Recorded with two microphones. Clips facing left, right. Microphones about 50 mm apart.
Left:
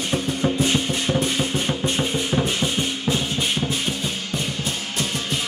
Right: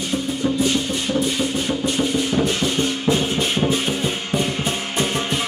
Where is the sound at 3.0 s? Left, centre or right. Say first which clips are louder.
Right 4 dB; centre; by 5.4 s right.